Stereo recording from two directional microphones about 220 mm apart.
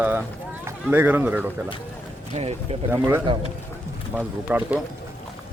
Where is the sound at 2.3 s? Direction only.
25° right (ahead or behind).